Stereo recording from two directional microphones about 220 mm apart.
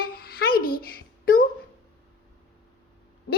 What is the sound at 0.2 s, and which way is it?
Babbling, 45° left (ahead or behind).